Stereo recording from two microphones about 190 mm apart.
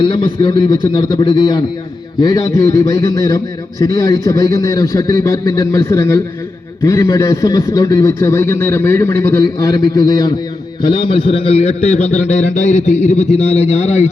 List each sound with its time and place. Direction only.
0.0 s a man's voice: 25° left (ahead or behind)